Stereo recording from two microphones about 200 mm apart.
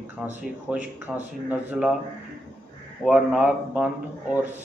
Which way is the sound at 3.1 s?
10° right (ahead or behind).